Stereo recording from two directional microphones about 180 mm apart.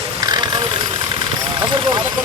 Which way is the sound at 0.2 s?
25° right (ahead or behind).